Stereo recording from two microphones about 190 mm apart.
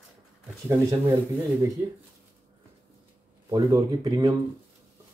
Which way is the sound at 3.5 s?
15° right (ahead or behind).